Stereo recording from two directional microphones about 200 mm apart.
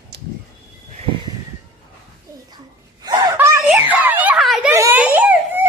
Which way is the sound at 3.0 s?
20° right (ahead or behind).